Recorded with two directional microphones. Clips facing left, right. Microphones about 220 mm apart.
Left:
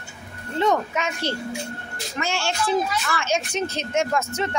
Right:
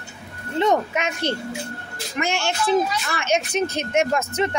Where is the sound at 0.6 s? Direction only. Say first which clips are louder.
Right 2 dB; 20° right (ahead or behind).